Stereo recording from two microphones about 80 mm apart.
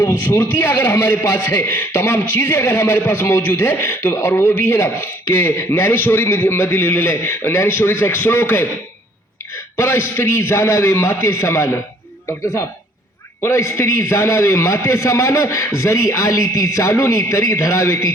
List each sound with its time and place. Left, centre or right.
0.0 s a man's voice: left
9.7 s a man's voice: left
13.4 s a man's voice: left